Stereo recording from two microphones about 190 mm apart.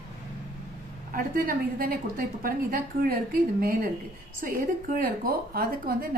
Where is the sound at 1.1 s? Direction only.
50° right (ahead or behind).